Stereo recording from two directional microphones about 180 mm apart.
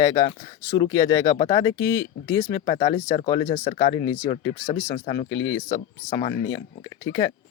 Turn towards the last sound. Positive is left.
turn(degrees=20)  # may be behind; listen again after turning